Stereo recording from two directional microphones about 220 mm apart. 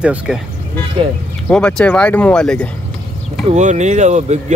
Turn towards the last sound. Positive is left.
turn(degrees=-30)  # may be behind; listen again after turning